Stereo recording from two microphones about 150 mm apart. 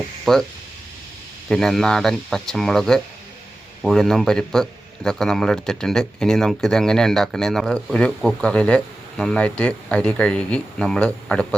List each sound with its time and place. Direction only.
0.3 s a man's voice: 5° left (ahead or behind)
1.5 s a man's voice: 5° left (ahead or behind)